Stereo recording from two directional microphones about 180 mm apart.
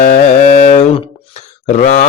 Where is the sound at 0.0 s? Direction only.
40° left (ahead or behind).